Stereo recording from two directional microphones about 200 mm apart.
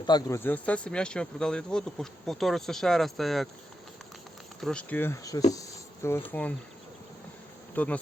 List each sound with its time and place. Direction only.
0.0 s speech: 20° left (ahead or behind); by 3.5 s centre (ahead or behind)
4.6 s speech: 5° left (ahead or behind)
5.5 s a sound: 15° left (ahead or behind)
7.8 s speech: 10° left (ahead or behind)